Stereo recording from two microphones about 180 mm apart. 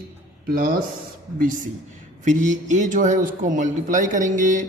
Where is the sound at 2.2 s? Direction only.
45° right (ahead or behind).